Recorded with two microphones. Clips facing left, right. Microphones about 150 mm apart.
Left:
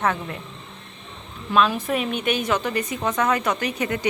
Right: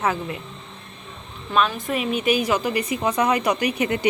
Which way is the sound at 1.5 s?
Centre (ahead or behind).